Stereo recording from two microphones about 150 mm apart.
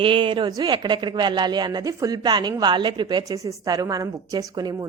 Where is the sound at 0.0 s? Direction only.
35° right (ahead or behind).